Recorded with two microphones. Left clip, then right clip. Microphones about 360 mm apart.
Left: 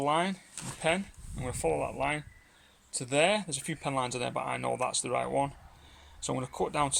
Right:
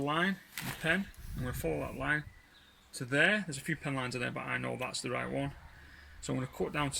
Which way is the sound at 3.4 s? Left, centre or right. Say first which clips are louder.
Left 2 dB; left.